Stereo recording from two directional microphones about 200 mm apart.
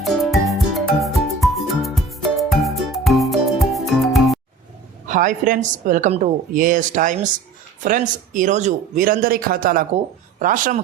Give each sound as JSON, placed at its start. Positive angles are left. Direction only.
{"t": 0.0, "sound": "music", "side_deg": 0}
{"t": 5.0, "sound": "a woman's voice", "side_deg": -40}
{"t": 8.3, "sound": "a woman's voice", "side_deg": -40}